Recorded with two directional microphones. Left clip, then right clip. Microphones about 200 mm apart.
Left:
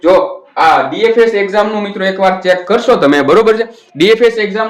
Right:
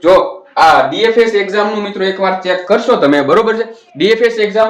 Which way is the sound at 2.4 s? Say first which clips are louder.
Left 2 dB; 40° left (ahead or behind).